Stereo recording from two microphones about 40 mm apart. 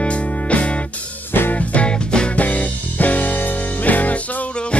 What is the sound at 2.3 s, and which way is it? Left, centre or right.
Music, left.